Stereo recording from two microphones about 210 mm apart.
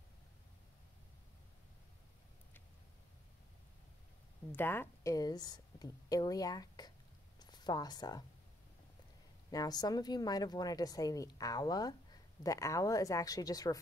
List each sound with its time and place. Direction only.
4.5 s a woman's voice: 10° left (ahead or behind)
7.3 s a sound: 20° left (ahead or behind)
9.5 s a woman's voice: 20° left (ahead or behind)